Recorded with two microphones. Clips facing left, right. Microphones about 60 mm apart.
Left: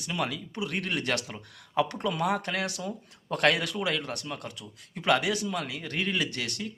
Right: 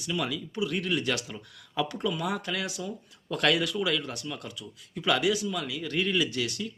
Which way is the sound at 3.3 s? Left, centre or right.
Left.